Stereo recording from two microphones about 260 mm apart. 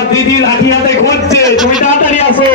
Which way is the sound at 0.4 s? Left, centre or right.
Left.